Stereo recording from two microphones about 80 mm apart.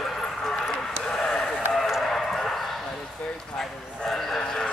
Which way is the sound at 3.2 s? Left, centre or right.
Centre.